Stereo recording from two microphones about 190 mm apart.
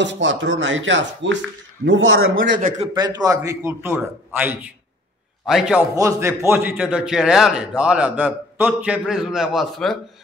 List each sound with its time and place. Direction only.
0.0 s speech: 70° right (ahead or behind)
3.0 s a man's voice: 20° right (ahead or behind); by 5.8 s centre (ahead or behind)
5.9 s a man's voice: 15° right (ahead or behind); by 9.9 s centre (ahead or behind)